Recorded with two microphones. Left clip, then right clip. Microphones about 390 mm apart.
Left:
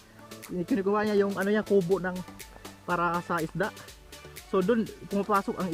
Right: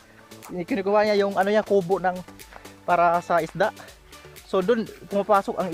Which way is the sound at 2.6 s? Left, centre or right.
Centre.